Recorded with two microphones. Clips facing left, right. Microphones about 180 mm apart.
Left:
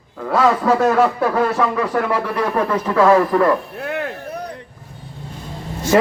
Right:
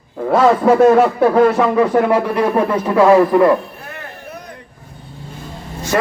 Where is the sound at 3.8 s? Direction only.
70° left (ahead or behind).